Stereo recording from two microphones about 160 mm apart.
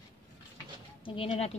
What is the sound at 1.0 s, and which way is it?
Speech, 35° left (ahead or behind).